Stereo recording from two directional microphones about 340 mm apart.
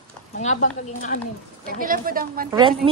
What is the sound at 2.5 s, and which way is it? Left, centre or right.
Speech, centre.